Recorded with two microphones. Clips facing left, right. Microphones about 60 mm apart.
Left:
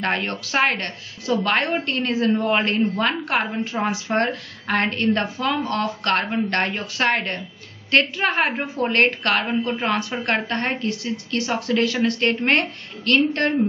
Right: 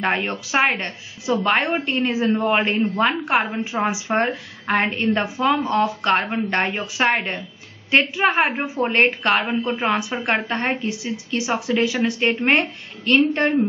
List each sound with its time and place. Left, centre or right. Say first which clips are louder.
0.0 s speech: right 2 dB; centre
2.8 s speech: right 2 dB; centre